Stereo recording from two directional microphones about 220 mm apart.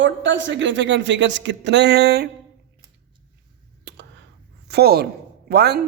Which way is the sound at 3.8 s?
50° right (ahead or behind).